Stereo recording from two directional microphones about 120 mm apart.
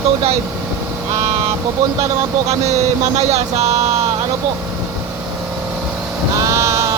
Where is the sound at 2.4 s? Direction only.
65° right (ahead or behind).